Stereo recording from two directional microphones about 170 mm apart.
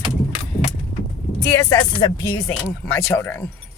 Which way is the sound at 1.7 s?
20° left (ahead or behind).